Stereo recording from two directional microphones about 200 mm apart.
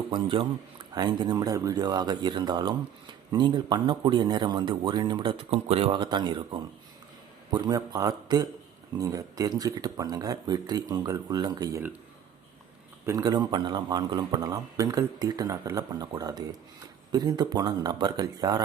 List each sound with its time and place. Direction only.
0.1 s speech: 25° right (ahead or behind)
13.1 s speech: 20° right (ahead or behind)